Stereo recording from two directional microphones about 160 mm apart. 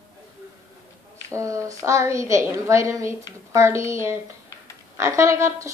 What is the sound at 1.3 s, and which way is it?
A woman's voice, 20° right (ahead or behind).